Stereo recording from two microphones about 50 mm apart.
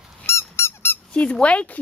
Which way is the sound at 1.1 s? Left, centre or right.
Left.